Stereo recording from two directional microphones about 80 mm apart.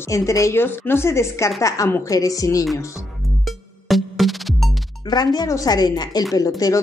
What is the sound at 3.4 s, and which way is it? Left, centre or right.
Music, centre.